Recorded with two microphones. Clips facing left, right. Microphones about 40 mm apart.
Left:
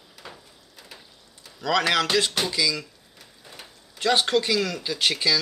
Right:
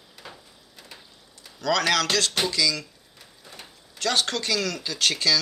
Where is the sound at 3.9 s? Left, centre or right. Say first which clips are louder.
Left 4 dB; centre.